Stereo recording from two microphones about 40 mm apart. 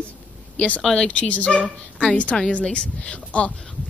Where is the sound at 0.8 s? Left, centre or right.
Centre.